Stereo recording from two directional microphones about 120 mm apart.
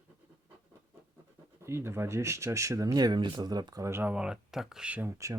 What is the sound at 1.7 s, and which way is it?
Speech, 20° right (ahead or behind).